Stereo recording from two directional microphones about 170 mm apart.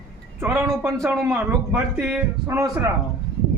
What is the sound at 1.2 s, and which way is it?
A man's voice, 15° right (ahead or behind).